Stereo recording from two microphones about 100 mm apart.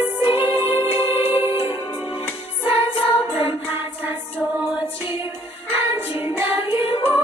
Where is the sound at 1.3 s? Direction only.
70° left (ahead or behind).